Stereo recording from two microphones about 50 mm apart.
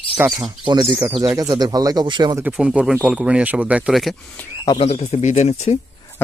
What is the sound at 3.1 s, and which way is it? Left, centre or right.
Speech, centre.